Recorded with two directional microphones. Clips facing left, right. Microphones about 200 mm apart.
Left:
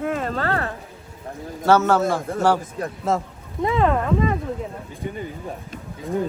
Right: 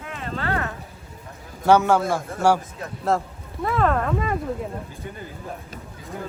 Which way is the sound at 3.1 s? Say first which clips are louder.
Right 1 dB; centre (ahead or behind).